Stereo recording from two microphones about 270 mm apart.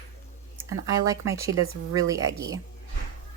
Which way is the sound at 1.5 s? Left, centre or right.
Right.